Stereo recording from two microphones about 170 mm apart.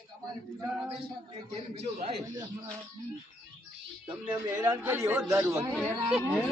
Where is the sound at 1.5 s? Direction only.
35° right (ahead or behind).